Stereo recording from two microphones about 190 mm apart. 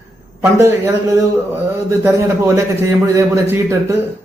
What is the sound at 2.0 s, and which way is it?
A man's voice, 15° right (ahead or behind).